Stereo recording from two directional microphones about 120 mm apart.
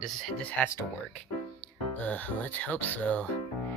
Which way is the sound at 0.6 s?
10° left (ahead or behind).